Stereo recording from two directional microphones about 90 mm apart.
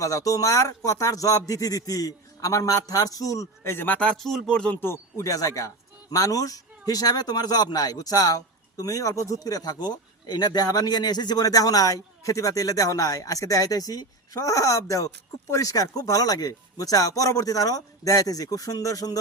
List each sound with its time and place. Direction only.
0.0 s speech: 35° left (ahead or behind); by 4.1 s 20° left (ahead or behind)
4.2 s speech: 5° left (ahead or behind)
4.8 s speech: 30° left (ahead or behind)